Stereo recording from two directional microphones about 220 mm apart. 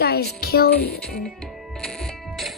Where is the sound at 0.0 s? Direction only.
45° left (ahead or behind).